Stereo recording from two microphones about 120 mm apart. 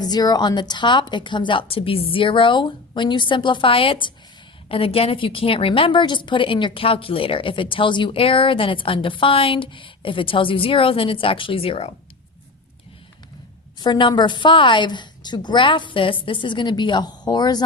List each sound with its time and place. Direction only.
0.0 s a woman's voice: 35° left (ahead or behind); by 11.9 s 50° left (ahead or behind)
13.7 s a woman's voice: 35° left (ahead or behind)